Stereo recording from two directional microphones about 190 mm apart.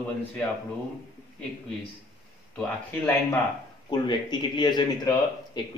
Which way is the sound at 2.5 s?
5° left (ahead or behind).